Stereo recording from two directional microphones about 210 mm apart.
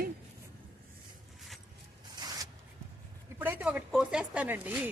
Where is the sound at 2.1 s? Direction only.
20° right (ahead or behind).